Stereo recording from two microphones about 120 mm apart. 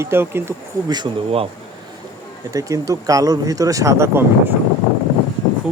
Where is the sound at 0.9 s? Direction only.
35° right (ahead or behind).